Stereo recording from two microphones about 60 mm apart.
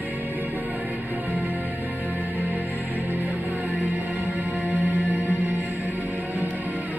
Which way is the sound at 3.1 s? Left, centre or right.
Right.